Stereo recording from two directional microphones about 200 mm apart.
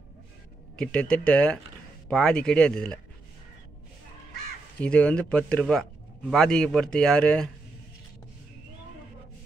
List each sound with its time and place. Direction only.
0.7 s speech: 5° left (ahead or behind)
4.7 s speech: 5° left (ahead or behind)